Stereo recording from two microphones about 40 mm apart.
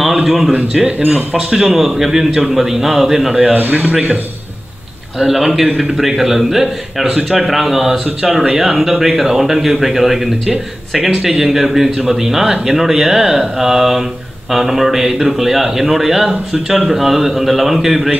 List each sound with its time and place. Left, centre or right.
0.0 s a sound: centre
0.5 s speech: right
1.5 s a man's voice: centre
1.8 s a man's voice: centre
3.5 s speech: right
5.2 s a man's voice: centre